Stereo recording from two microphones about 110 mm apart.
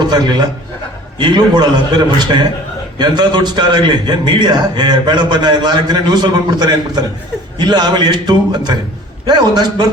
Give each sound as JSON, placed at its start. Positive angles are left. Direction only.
{"t": 0.0, "sound": "a man's voice", "side_deg": -40}